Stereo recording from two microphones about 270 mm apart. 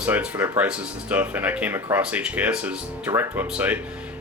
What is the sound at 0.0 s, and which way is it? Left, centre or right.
Speech, centre.